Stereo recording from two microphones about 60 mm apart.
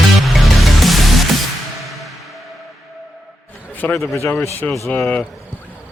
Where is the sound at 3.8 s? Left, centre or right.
Left.